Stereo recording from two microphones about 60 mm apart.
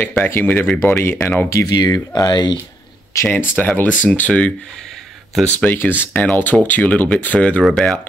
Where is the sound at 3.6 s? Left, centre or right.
Left.